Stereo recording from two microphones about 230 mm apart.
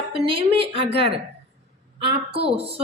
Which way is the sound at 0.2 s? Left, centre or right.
Right.